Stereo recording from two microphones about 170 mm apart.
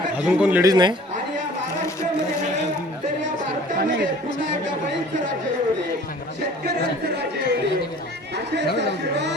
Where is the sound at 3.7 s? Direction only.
65° right (ahead or behind).